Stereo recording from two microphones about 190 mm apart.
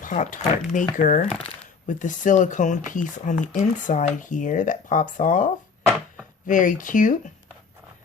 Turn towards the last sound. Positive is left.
turn(degrees=45)  # may be behind; listen again after turning